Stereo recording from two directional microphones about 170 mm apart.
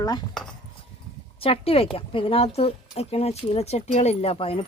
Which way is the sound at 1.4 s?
35° left (ahead or behind).